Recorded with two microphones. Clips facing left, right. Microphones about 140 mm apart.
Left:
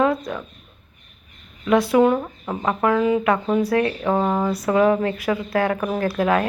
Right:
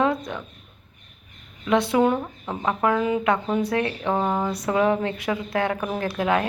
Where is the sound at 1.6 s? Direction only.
20° right (ahead or behind).